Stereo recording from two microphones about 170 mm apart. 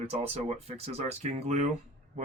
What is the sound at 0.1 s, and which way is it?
Speech, 35° right (ahead or behind).